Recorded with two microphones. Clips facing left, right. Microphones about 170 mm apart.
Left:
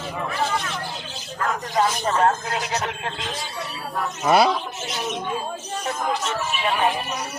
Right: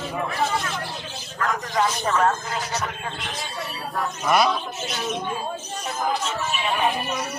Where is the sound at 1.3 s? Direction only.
30° left (ahead or behind).